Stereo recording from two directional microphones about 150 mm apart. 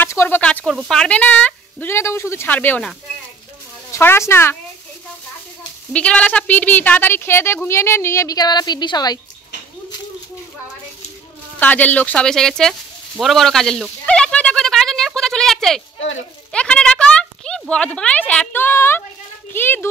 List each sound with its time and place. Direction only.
0.0 s speech: 15° left (ahead or behind)
3.9 s speech: 15° left (ahead or behind)
5.9 s speech: 10° left (ahead or behind); by 9.2 s 25° left (ahead or behind)
11.6 s speech: 10° left (ahead or behind)
13.2 s a sound: centre (ahead or behind)
16.5 s speech: 5° left (ahead or behind)